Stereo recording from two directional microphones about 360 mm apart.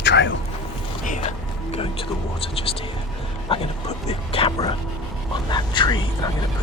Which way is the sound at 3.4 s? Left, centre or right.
Centre.